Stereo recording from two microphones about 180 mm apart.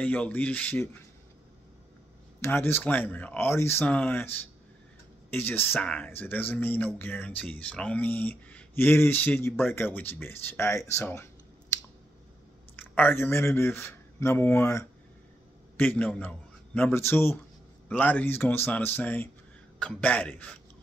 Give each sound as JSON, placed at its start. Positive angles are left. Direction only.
{"t": 0.0, "sound": "speech", "side_deg": 10}
{"t": 2.4, "sound": "speech", "side_deg": 10}
{"t": 12.9, "sound": "a man's voice", "side_deg": 10}